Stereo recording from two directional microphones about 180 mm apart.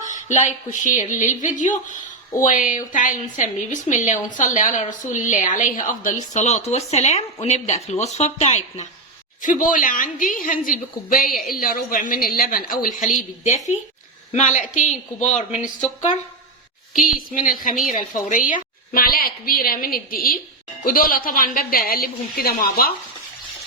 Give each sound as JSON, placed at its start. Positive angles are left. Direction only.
{"t": 0.1, "sound": "a woman's voice", "side_deg": 45}
{"t": 11.3, "sound": "a woman's voice", "side_deg": 0}
{"t": 11.5, "sound": "a woman's voice", "side_deg": 50}
{"t": 16.9, "sound": "a woman's voice", "side_deg": 50}